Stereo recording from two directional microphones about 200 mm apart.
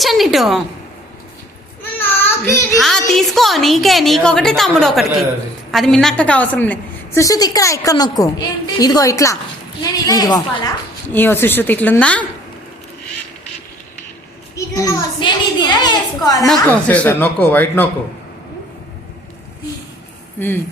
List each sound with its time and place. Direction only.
0.0 s a woman's voice: centre (ahead or behind)
1.8 s child singing: 10° left (ahead or behind)
2.7 s a sound: centre (ahead or behind)
3.1 s a woman's voice: centre (ahead or behind)
14.5 s a child's voice: 15° left (ahead or behind)
16.5 s a woman's voice: 5° left (ahead or behind)